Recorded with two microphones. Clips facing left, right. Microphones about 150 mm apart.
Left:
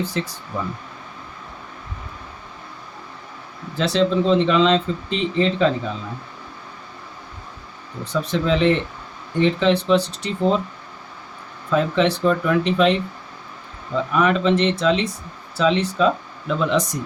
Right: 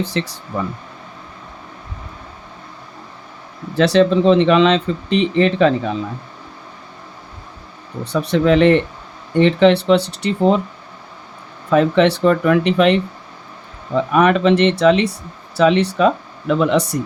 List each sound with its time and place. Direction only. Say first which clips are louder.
0.0 s speech: right 3 dB; 85° right
3.8 s speech: right 6 dB; 70° right (ahead or behind)
8.0 s speech: right 6 dB; 70° right (ahead or behind)
11.7 s speech: right 5 dB; 65° right (ahead or behind)